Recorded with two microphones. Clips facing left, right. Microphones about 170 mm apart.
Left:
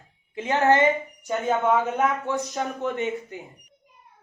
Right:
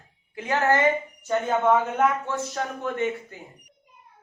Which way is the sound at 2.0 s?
15° left (ahead or behind).